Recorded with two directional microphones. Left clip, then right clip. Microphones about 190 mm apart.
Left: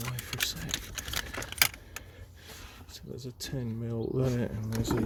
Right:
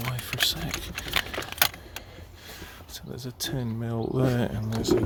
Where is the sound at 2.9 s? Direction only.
10° right (ahead or behind).